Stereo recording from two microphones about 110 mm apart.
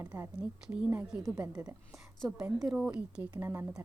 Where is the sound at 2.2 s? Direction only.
5° right (ahead or behind).